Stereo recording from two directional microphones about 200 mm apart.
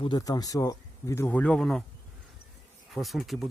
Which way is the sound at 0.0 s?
20° left (ahead or behind).